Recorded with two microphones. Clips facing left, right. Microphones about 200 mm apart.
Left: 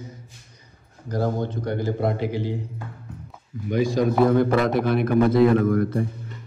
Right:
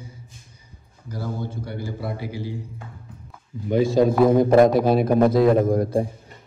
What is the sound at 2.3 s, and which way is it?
Speech, 10° right (ahead or behind).